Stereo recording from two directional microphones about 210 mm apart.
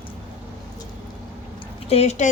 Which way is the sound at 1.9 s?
30° left (ahead or behind).